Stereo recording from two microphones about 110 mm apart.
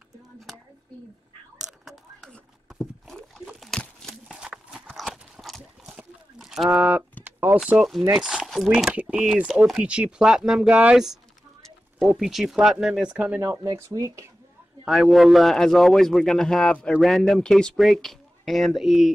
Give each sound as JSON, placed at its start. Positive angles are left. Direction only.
{"t": 1.6, "sound": "a sound", "side_deg": -5}
{"t": 4.8, "sound": "clip-clop", "side_deg": 0}
{"t": 5.6, "sound": "a sound", "side_deg": -5}
{"t": 8.2, "sound": "a man's voice", "side_deg": -5}
{"t": 13.7, "sound": "speech", "side_deg": -30}
{"t": 14.9, "sound": "a man's voice", "side_deg": 0}